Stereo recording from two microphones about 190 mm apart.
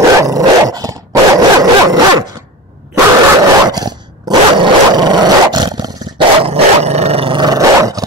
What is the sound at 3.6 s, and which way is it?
Dog, 20° right (ahead or behind).